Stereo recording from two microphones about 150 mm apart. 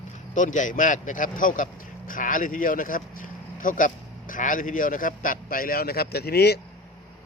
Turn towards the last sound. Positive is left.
turn(degrees=90)